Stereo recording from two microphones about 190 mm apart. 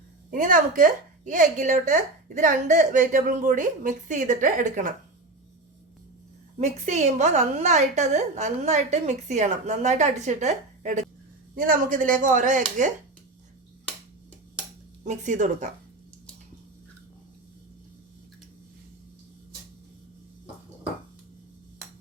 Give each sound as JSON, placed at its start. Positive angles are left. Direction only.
{"t": 0.3, "sound": "a woman's voice", "side_deg": -45}
{"t": 6.6, "sound": "a woman's voice", "side_deg": -40}
{"t": 15.0, "sound": "a woman's voice", "side_deg": -40}